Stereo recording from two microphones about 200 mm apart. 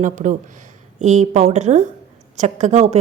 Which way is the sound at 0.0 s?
40° right (ahead or behind).